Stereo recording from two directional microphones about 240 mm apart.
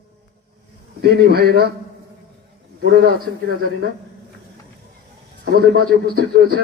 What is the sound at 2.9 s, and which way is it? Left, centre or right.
Speech, right.